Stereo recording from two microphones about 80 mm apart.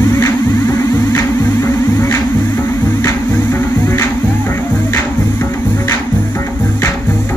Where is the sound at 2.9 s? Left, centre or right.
Left.